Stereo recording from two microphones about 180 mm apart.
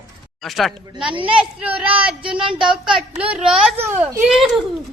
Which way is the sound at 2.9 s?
5° right (ahead or behind).